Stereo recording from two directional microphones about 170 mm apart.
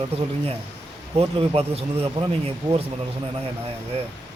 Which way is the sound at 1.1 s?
35° right (ahead or behind).